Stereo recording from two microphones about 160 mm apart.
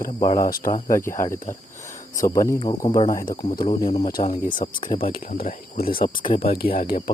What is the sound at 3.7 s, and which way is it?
Speech, 35° left (ahead or behind).